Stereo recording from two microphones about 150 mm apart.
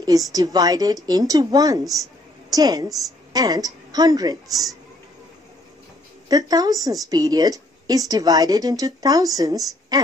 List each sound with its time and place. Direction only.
0.0 s a woman's voice: 25° right (ahead or behind)
6.2 s a woman's voice: 25° right (ahead or behind)